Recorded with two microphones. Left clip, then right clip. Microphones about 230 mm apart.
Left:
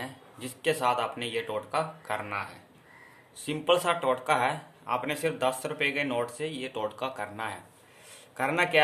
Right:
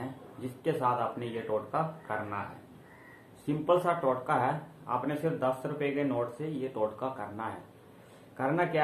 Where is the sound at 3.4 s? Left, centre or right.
Left.